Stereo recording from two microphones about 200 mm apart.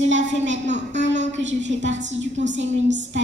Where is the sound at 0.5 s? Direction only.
35° right (ahead or behind).